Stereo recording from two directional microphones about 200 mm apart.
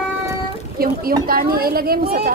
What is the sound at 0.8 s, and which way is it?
Speech, 50° right (ahead or behind).